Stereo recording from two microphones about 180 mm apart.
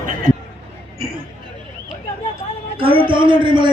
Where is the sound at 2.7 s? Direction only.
30° right (ahead or behind).